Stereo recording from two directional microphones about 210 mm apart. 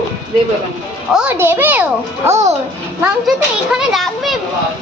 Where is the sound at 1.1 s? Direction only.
10° right (ahead or behind).